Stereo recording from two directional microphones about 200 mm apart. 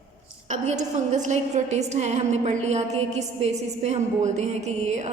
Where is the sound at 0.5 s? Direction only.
35° right (ahead or behind).